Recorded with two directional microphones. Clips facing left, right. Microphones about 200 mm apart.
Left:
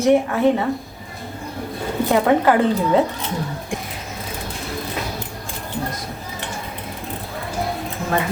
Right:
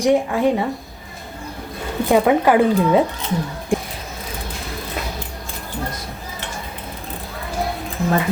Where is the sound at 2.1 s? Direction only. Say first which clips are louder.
Right 2 dB; 15° right (ahead or behind).